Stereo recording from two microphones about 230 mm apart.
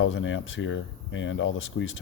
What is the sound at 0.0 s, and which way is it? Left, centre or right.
Speech, left.